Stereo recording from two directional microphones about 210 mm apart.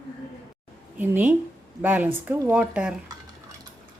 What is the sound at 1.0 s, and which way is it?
Speech, 10° right (ahead or behind).